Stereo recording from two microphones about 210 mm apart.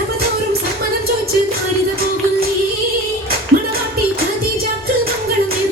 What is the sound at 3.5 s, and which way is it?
Music, 45° right (ahead or behind).